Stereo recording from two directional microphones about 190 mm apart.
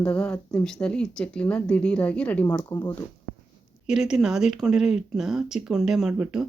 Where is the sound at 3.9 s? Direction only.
5° right (ahead or behind).